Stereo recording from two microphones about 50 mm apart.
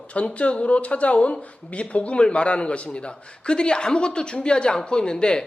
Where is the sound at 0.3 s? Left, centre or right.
Left.